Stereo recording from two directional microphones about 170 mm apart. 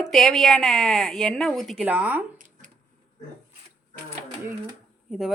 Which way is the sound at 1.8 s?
10° right (ahead or behind).